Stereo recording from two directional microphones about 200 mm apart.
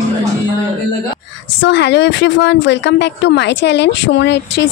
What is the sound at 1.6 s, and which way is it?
Speech, 60° left (ahead or behind).